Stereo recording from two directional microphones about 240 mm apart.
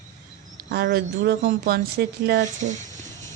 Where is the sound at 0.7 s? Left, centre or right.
Right.